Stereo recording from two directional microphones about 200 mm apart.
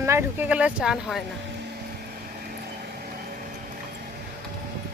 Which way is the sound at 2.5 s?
45° right (ahead or behind).